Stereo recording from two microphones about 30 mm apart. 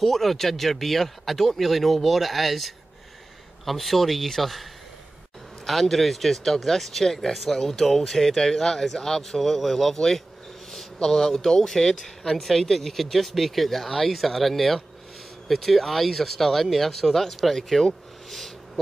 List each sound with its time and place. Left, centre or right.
0.0 s speech: centre
5.7 s speech: centre
9.4 s speech: centre
9.9 s speech: centre